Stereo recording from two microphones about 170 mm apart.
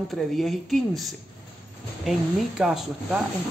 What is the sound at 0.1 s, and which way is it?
Speech, centre (ahead or behind).